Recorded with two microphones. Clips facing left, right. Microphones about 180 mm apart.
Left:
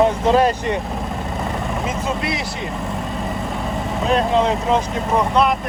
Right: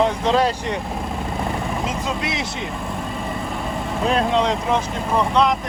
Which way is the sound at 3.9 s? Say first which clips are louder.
Left 2 dB; centre (ahead or behind).